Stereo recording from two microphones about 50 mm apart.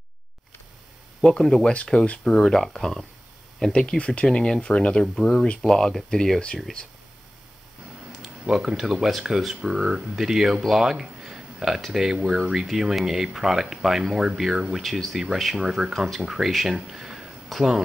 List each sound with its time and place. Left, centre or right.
1.2 s speech: centre
8.2 s speech: centre
14.8 s speech: centre